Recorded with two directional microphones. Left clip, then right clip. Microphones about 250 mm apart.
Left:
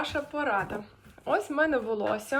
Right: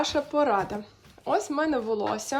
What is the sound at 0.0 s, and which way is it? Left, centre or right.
Speech, centre.